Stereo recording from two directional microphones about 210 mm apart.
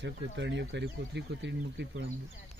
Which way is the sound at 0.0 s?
55° right (ahead or behind).